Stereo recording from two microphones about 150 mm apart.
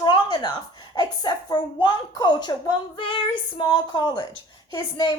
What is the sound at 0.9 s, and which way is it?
A woman's voice, 30° left (ahead or behind).